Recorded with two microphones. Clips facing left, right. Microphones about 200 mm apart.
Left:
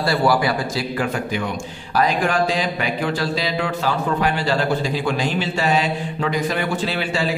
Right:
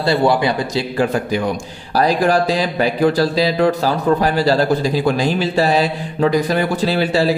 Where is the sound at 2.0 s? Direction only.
35° right (ahead or behind).